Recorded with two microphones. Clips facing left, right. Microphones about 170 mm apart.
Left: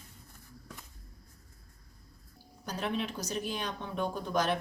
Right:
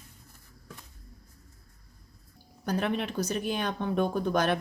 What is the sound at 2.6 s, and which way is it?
Speech, 60° right (ahead or behind).